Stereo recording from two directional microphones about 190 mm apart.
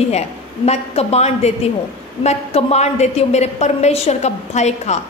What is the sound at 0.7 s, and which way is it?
A woman's voice, 35° left (ahead or behind).